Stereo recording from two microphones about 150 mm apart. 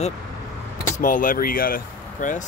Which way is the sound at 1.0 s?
65° left (ahead or behind).